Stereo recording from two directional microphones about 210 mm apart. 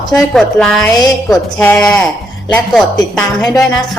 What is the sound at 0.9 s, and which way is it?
A woman's voice, 20° left (ahead or behind).